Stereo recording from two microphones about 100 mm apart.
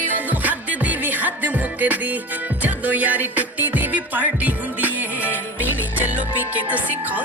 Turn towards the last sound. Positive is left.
turn(degrees=-15)  # may be behind; listen again after turning